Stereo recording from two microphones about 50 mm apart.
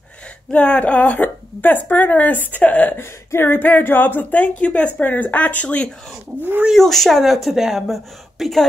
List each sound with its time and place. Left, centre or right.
0.5 s a woman's voice: left
3.3 s a woman's voice: left
5.0 s a woman's voice: left
6.7 s speech: centre